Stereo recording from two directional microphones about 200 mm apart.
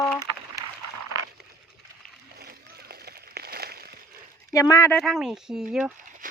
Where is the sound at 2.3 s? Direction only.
50° right (ahead or behind).